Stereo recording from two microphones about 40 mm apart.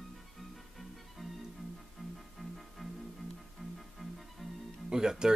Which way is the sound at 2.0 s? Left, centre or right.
Centre.